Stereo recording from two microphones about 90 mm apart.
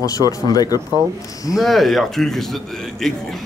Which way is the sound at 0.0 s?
45° left (ahead or behind).